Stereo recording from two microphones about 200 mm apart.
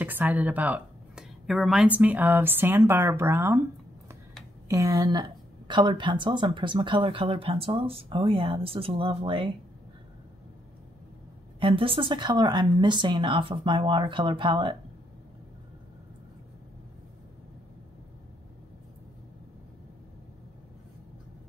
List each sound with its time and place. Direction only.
0.0 s a sound: 10° right (ahead or behind)
2.0 s speech: 10° right (ahead or behind)
4.6 s a woman's voice: 15° right (ahead or behind)
11.6 s a woman's voice: 25° right (ahead or behind)